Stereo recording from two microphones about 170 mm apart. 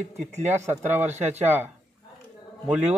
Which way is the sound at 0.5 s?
15° right (ahead or behind).